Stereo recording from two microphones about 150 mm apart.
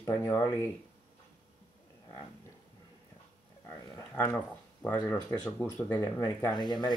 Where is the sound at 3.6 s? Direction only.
15° left (ahead or behind).